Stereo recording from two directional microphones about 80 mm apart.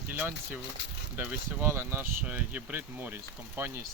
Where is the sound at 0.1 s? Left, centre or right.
Right.